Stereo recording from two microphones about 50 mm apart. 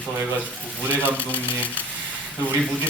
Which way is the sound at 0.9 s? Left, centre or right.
Left.